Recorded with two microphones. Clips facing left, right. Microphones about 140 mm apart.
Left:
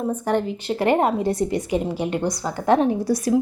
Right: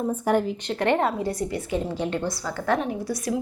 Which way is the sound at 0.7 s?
10° left (ahead or behind).